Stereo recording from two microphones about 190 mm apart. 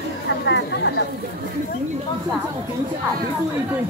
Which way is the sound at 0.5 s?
65° left (ahead or behind).